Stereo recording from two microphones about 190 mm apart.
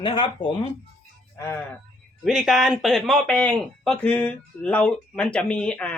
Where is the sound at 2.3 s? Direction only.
Centre (ahead or behind).